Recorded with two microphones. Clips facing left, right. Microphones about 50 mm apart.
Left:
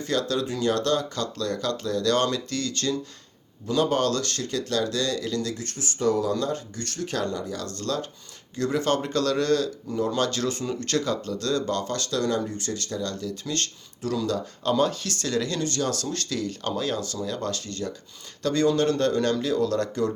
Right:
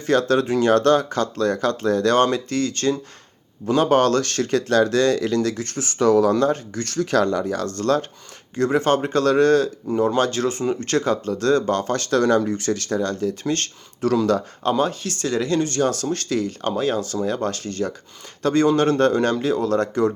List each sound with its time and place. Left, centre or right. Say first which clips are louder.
0.0 s speech: right 7 dB; right
5.6 s speech: right 6 dB; right
6.8 s speech: right 10 dB; right
7.4 s speech: right 9 dB; right
8.5 s speech: right 6 dB; right
12.4 s speech: right 8 dB; right
14.0 s speech: right 8 dB; right
14.6 s speech: right 3 dB; right